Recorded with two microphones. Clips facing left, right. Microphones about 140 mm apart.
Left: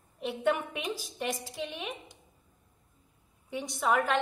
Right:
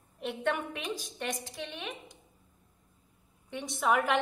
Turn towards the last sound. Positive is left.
turn(degrees=-5)  # may be behind; listen again after turning